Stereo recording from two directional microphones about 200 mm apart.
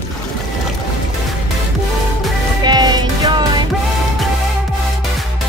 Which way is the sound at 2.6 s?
20° right (ahead or behind).